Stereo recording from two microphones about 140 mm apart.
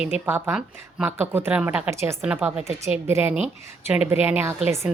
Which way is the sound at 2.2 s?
10° right (ahead or behind).